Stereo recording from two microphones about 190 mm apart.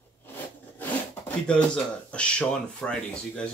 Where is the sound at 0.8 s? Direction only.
5° left (ahead or behind).